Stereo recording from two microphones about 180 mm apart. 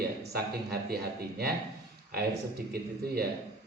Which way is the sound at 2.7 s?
60° right (ahead or behind).